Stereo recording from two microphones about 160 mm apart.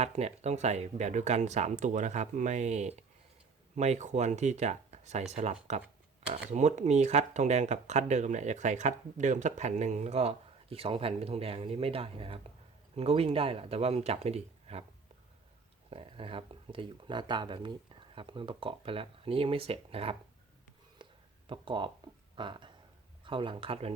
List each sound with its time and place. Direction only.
0.0 s speech: 40° right (ahead or behind)
15.9 s speech: 35° right (ahead or behind)
21.0 s a sound: 30° right (ahead or behind)
22.4 s speech: 30° right (ahead or behind)